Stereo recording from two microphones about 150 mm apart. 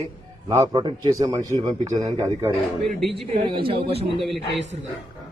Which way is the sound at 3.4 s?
35° right (ahead or behind).